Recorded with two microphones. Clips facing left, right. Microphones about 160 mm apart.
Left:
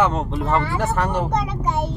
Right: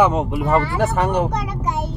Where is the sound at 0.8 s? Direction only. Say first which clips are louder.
Right 3 dB; 20° right (ahead or behind).